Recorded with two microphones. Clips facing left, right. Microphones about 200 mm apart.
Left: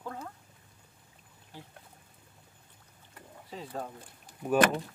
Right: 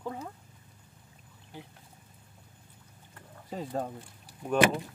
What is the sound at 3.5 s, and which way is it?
Speech, 45° right (ahead or behind).